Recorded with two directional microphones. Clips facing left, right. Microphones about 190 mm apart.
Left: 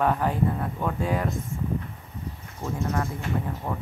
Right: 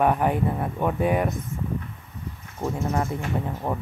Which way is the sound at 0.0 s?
15° right (ahead or behind).